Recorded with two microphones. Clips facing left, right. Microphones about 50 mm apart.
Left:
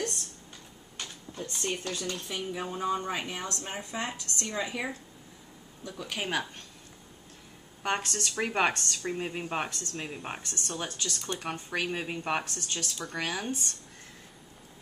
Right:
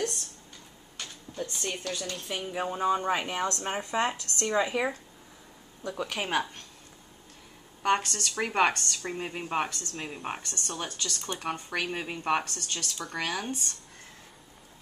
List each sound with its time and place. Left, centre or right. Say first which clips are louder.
0.9 s speech: right 3 dB; centre
2.1 s speech: right 1 dB; centre
2.5 s speech: right 4 dB; centre
6.1 s speech: right 1 dB; centre
7.8 s speech: right 4 dB; centre
12.4 s a woman's voice: even; centre